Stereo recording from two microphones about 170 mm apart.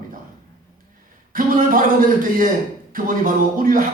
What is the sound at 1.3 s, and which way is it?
A man's voice, 55° right (ahead or behind).